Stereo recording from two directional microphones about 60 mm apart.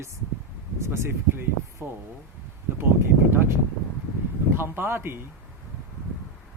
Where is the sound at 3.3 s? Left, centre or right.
Right.